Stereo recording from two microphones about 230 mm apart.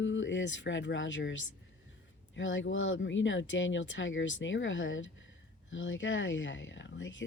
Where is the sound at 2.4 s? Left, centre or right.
Left.